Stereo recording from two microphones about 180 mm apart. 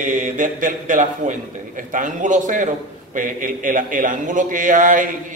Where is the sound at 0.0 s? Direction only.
45° right (ahead or behind).